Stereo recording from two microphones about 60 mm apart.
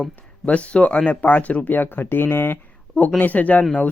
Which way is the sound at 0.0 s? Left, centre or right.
Left.